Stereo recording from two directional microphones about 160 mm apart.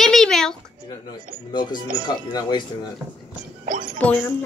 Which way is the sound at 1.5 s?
25° left (ahead or behind).